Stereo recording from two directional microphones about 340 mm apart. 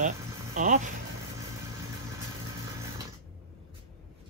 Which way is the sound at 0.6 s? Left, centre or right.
Right.